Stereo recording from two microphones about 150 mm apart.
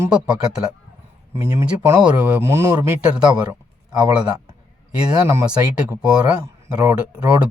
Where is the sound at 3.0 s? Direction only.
5° right (ahead or behind).